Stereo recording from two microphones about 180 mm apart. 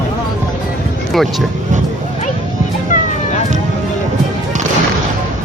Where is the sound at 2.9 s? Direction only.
40° left (ahead or behind).